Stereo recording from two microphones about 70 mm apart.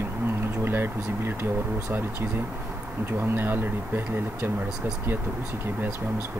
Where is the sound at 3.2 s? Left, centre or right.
Right.